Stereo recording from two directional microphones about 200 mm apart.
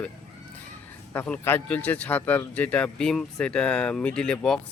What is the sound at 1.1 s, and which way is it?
A man's voice, 10° left (ahead or behind).